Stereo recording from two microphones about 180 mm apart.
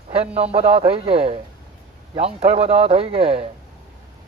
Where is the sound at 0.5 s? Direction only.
30° right (ahead or behind).